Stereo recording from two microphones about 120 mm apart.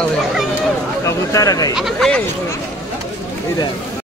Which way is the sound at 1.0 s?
30° left (ahead or behind).